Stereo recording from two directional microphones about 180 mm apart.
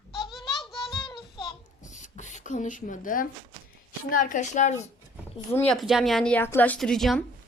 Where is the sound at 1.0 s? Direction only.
25° left (ahead or behind).